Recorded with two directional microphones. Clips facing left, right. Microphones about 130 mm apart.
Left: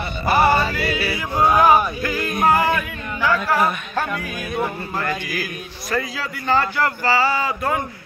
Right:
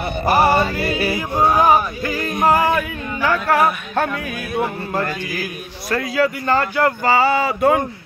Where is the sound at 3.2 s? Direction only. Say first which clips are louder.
Right 2 dB; 60° right (ahead or behind).